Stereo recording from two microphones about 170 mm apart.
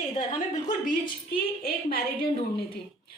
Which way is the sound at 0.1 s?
40° left (ahead or behind).